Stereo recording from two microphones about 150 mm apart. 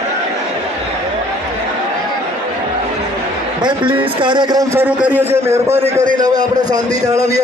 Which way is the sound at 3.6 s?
30° right (ahead or behind).